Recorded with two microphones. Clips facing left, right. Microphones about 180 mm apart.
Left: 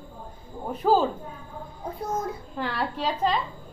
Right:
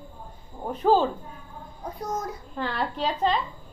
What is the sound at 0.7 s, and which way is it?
Speech, 5° left (ahead or behind).